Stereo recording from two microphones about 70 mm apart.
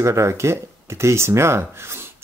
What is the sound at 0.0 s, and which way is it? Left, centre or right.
A man's voice, right.